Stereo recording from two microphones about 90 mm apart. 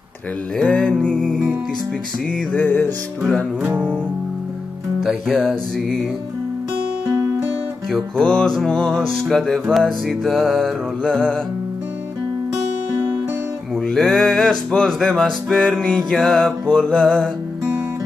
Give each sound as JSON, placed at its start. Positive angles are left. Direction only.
{"t": 0.6, "sound": "music", "side_deg": 10}
{"t": 2.5, "sound": "music", "side_deg": 25}
{"t": 5.0, "sound": "music", "side_deg": 0}
{"t": 7.9, "sound": "music", "side_deg": 10}
{"t": 13.8, "sound": "music", "side_deg": 5}